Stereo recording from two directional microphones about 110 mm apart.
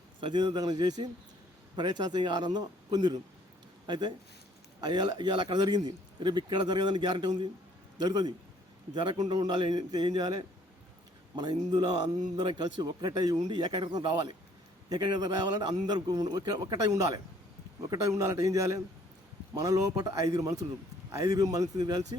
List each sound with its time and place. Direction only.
0.2 s a man's voice: 45° right (ahead or behind)